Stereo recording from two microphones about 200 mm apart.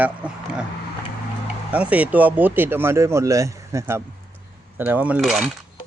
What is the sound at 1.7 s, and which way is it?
Speech, 5° right (ahead or behind).